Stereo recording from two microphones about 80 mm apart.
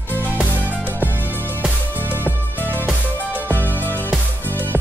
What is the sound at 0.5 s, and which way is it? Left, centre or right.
Music, right.